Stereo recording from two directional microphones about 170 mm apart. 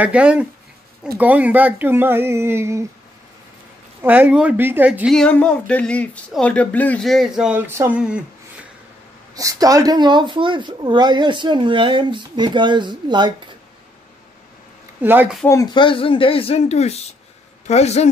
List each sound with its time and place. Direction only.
0.0 s speech: 5° right (ahead or behind)
4.0 s speech: 10° right (ahead or behind)
5.1 s speech: 5° left (ahead or behind)
9.3 s speech: 20° right (ahead or behind)
15.0 s speech: 10° right (ahead or behind)
15.4 s speech: 20° left (ahead or behind); by 18.0 s 40° left (ahead or behind)